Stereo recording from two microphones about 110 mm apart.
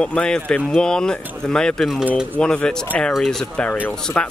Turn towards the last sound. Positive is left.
turn(degrees=10)  # may be behind; listen again after turning